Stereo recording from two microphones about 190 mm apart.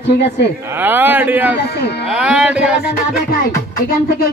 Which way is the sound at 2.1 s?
5° right (ahead or behind).